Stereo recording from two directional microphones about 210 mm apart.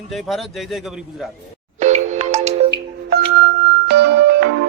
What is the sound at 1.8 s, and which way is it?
Music, 35° right (ahead or behind).